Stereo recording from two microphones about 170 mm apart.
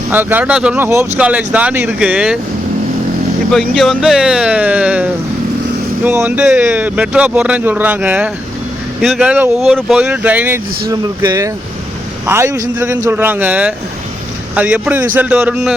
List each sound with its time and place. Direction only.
0.1 s speech: 10° right (ahead or behind)
3.5 s speech: centre (ahead or behind)
10.8 s speech: 20° right (ahead or behind); by 15.7 s 5° right (ahead or behind)